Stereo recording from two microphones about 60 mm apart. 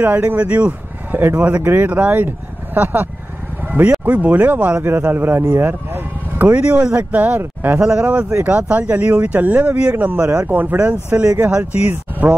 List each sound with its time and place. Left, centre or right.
0.0 s speech: right
3.6 s a sound: right
4.0 s speech: right
10.2 s speech: right
10.5 s speech: right